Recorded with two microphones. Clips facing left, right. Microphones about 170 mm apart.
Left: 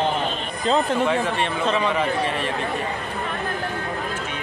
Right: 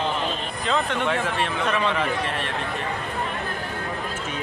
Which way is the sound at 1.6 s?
20° left (ahead or behind).